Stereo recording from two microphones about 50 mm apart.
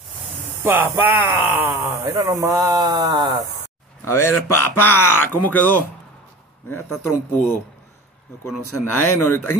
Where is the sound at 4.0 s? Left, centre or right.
Left.